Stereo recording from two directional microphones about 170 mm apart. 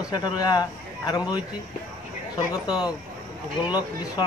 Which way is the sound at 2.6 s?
25° left (ahead or behind).